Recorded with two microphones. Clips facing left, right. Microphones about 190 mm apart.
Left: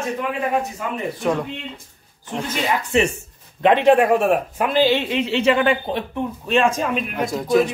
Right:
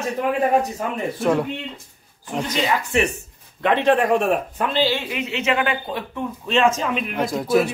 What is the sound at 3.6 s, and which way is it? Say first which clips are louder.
A man's voice: left 4 dB; 15° left (ahead or behind).